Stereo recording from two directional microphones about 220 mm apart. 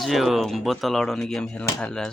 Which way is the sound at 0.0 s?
Centre (ahead or behind).